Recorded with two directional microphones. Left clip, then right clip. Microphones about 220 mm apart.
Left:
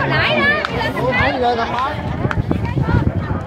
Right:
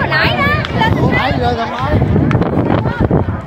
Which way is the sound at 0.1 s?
55° right (ahead or behind).